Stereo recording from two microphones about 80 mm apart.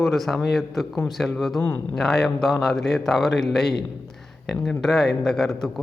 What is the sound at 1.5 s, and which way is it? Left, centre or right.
Speech, left.